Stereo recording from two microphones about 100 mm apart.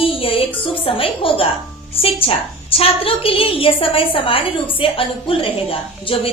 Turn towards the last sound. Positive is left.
turn(degrees=70)  # may be behind; listen again after turning